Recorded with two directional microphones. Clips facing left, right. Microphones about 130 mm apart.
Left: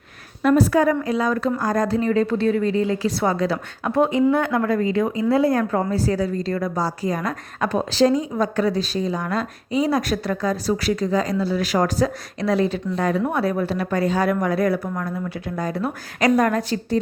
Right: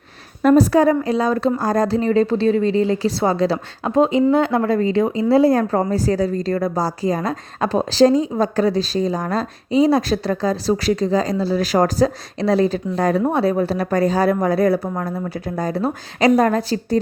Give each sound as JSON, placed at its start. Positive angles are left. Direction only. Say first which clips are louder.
{"t": 0.4, "sound": "a woman's voice", "louder": "right 4 dB", "side_deg": -40}
{"t": 3.9, "sound": "a woman's voice", "louder": "right 3 dB", "side_deg": -20}